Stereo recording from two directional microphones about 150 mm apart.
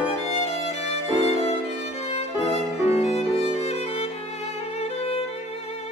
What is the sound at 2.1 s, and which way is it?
Music, 45° left (ahead or behind).